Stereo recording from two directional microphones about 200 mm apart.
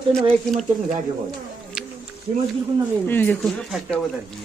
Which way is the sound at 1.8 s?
5° right (ahead or behind).